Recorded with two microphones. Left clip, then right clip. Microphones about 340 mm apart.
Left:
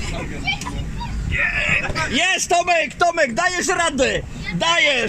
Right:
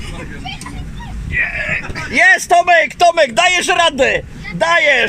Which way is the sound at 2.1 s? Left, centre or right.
Right.